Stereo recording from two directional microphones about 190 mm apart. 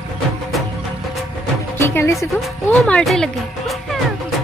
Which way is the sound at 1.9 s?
10° left (ahead or behind).